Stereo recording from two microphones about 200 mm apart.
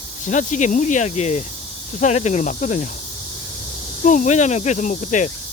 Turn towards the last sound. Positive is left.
turn(degrees=40)  # may be behind; listen again after turning